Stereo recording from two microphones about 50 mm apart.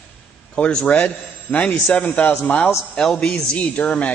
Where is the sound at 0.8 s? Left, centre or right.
Left.